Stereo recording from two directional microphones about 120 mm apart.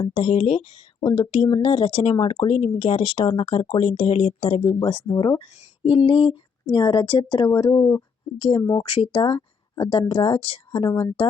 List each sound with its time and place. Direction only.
0.1 s speech: 55° left (ahead or behind)
5.8 s speech: 55° left (ahead or behind); by 7.8 s 35° left (ahead or behind)
8.4 s speech: 50° left (ahead or behind)